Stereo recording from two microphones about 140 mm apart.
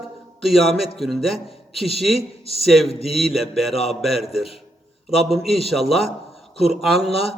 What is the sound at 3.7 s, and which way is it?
Speech, 45° left (ahead or behind).